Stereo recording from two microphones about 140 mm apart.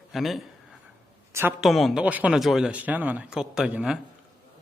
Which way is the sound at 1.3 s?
15° right (ahead or behind).